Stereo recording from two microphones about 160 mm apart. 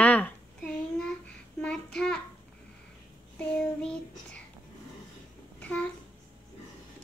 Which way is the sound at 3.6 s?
5° left (ahead or behind).